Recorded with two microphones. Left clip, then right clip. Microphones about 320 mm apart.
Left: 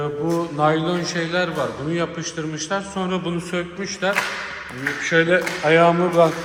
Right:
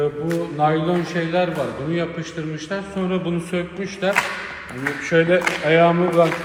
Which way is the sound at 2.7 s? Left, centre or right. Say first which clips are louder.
Even; centre.